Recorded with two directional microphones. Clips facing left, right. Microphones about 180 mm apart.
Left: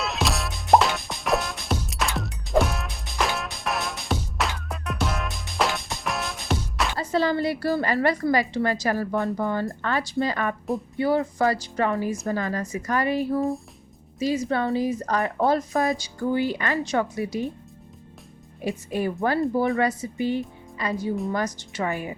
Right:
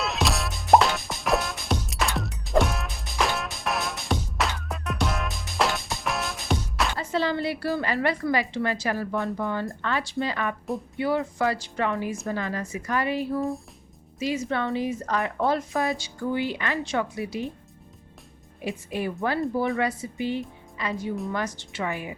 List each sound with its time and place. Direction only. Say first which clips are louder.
0.0 s music: even; centre (ahead or behind)
7.0 s speech: left 5 dB; 40° left (ahead or behind)
18.6 s speech: left 3 dB; 40° left (ahead or behind)